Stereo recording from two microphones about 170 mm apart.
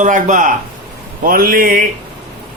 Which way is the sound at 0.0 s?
45° right (ahead or behind).